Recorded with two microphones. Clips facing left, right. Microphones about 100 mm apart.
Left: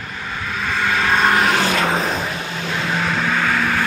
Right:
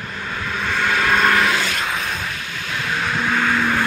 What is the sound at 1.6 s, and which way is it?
Vehicle, 60° left (ahead or behind).